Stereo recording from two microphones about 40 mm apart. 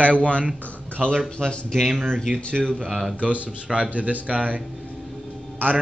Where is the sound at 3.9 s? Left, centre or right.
Right.